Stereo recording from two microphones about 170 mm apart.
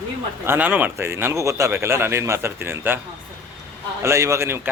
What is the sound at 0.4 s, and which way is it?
A man's voice, 10° right (ahead or behind).